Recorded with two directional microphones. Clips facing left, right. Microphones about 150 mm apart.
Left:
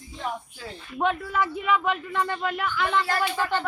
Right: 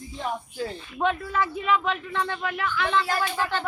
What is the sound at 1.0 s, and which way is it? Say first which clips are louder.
A woman's voice: even; 15° left (ahead or behind).